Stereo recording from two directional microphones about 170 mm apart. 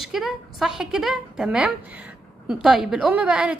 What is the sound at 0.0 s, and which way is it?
A woman's voice, centre (ahead or behind).